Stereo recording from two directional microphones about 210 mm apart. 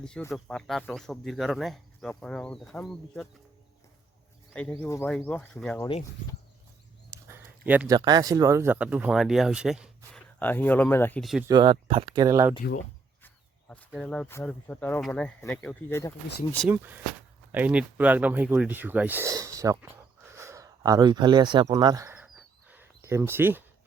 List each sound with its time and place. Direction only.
0.0 s speech: 5° left (ahead or behind)
4.7 s speech: 15° left (ahead or behind)
7.1 s a sound: 10° right (ahead or behind)
7.9 s speech: 20° right (ahead or behind)
10.4 s speech: 10° left (ahead or behind)
11.4 s speech: 20° right (ahead or behind)
13.2 s speech: 5° left (ahead or behind)
16.6 s speech: 10° right (ahead or behind)
22.4 s bird: 5° right (ahead or behind)